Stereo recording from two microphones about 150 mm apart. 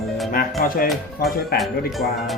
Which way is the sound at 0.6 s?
70° left (ahead or behind).